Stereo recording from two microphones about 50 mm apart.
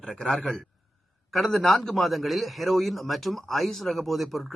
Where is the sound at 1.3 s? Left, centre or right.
Centre.